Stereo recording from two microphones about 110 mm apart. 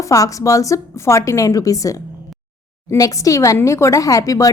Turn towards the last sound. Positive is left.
turn(degrees=30)  # may be behind; listen again after turning